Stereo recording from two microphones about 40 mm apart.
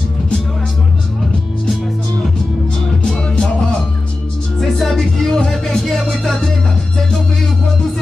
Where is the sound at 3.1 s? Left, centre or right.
Centre.